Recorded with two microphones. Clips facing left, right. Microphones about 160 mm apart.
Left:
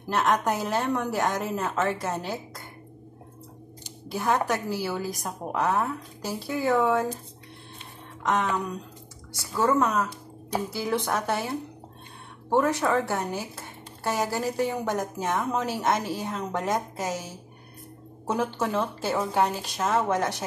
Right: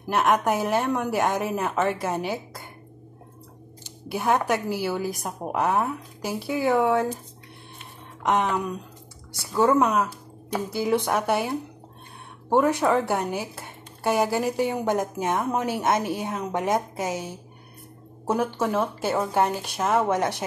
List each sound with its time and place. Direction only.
0.1 s speech: 10° right (ahead or behind)
4.1 s speech: 15° right (ahead or behind)
8.2 s speech: 15° right (ahead or behind)
18.2 s speech: 10° right (ahead or behind)